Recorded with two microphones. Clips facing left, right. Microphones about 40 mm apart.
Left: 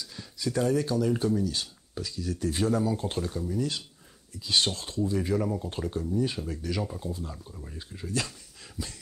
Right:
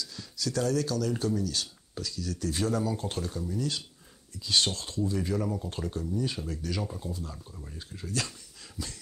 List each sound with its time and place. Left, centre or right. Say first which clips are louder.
0.0 s speech: left 1 dB; left
5.4 s speech: left 2 dB; centre
6.8 s speech: left 2 dB; centre
7.1 s speech: left 2 dB; left
7.3 s speech: left 2 dB; centre
7.7 s speech: left 2 dB; centre